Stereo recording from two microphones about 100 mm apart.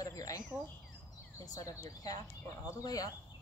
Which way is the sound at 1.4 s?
40° left (ahead or behind).